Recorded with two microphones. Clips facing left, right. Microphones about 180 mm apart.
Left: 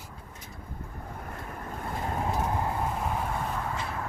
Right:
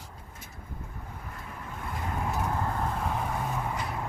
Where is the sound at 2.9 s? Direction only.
5° left (ahead or behind).